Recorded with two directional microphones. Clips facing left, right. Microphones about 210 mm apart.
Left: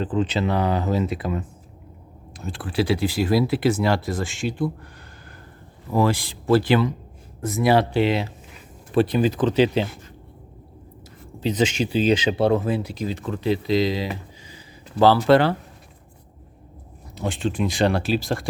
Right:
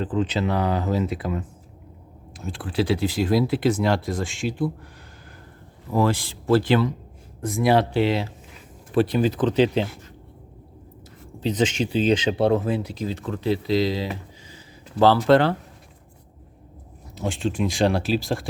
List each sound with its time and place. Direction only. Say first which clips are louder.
0.0 s speech: left 1 dB; 25° left (ahead or behind)
2.4 s speech: left 1 dB; centre (ahead or behind)
5.9 s speech: left 1 dB; 10° left (ahead or behind)
7.9 s speech: left 1 dB; 15° left (ahead or behind)
11.3 s speech: left 1 dB; 10° left (ahead or behind)
17.2 s speech: even; centre (ahead or behind)